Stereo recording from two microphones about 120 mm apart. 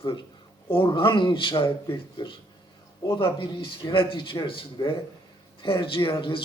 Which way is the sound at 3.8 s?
45° left (ahead or behind).